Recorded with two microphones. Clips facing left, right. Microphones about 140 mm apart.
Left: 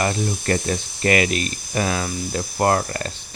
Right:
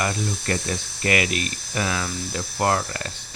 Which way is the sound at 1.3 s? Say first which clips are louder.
Left 3 dB; 30° right (ahead or behind).